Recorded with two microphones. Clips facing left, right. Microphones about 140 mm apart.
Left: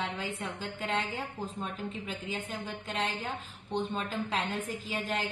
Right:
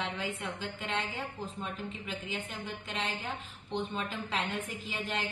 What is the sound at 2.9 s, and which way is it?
Speech, 40° left (ahead or behind).